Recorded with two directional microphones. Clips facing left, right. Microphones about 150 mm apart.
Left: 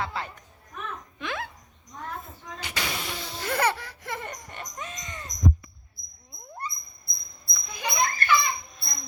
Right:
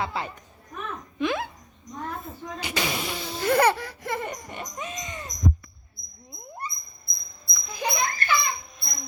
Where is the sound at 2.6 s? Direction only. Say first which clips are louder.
Right 5 dB; 15° right (ahead or behind).